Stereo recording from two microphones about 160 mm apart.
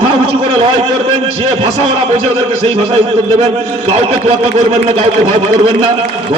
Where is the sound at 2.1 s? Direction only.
40° right (ahead or behind).